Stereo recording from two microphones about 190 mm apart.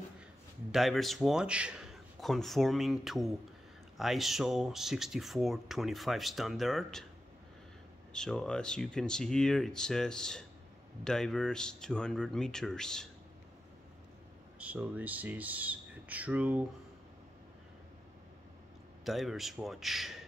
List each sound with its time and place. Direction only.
0.7 s speech: centre (ahead or behind)
8.1 s speech: 5° left (ahead or behind)
14.6 s speech: 5° right (ahead or behind)
19.0 s speech: centre (ahead or behind)